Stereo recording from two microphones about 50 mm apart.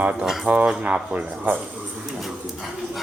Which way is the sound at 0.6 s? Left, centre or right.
Centre.